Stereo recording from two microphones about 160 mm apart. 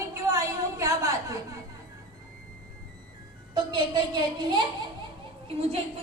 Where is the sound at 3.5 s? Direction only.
30° right (ahead or behind).